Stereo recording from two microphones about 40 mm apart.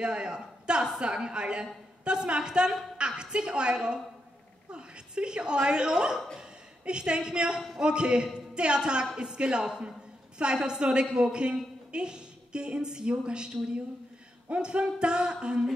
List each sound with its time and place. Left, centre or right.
0.0 s a woman's voice: right
14.5 s a woman's voice: right